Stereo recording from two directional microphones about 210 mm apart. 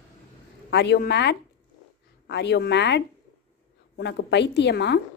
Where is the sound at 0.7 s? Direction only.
55° left (ahead or behind).